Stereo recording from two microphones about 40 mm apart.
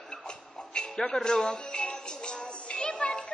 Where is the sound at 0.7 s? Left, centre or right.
Centre.